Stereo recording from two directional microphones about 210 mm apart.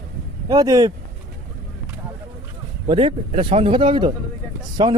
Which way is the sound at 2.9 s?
25° right (ahead or behind).